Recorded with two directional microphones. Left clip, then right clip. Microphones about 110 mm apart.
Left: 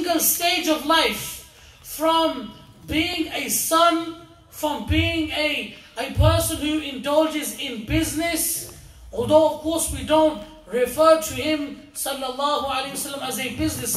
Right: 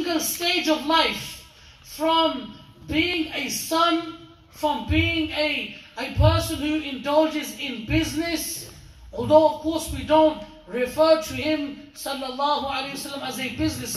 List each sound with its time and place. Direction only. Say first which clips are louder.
0.0 s a man's voice: left 3 dB; 35° left (ahead or behind)